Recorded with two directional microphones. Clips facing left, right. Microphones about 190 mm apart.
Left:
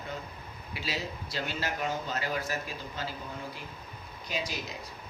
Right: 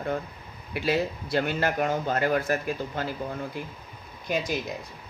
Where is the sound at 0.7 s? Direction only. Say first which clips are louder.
Right 11 dB; 55° right (ahead or behind).